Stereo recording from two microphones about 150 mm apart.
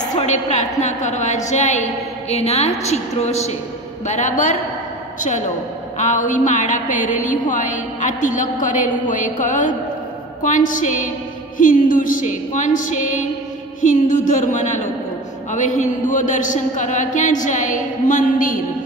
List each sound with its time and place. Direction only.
0.1 s a woman's voice: 50° left (ahead or behind)
5.9 s a woman's voice: 55° left (ahead or behind)